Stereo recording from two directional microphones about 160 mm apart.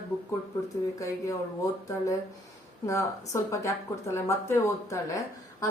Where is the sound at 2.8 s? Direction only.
20° left (ahead or behind).